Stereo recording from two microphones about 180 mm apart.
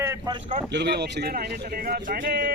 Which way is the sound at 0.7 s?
70° right (ahead or behind).